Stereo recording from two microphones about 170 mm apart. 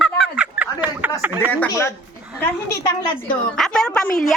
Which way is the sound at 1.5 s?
10° left (ahead or behind).